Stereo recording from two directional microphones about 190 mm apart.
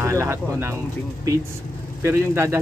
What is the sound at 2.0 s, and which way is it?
Speech, 15° right (ahead or behind).